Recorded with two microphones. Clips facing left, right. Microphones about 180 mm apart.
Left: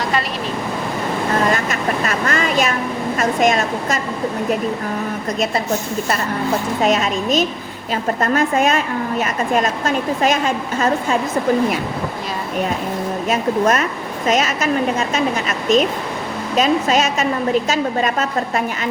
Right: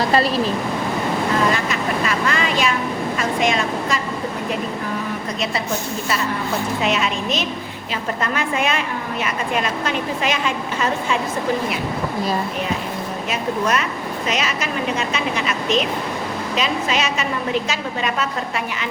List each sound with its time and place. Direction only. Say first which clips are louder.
1.5 s vehicle: left 1 dB; 45° left (ahead or behind)
3.2 s a woman's voice: left 5 dB; 45° left (ahead or behind)
6.8 s a woman's voice: left 6 dB; 45° left (ahead or behind)
13.3 s a woman's voice: left 4 dB; 45° left (ahead or behind)